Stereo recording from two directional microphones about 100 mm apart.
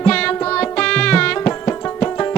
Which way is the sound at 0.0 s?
10° left (ahead or behind).